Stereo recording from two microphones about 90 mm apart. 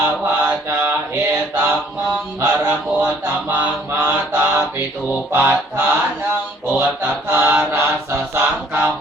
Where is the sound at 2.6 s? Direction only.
20° right (ahead or behind).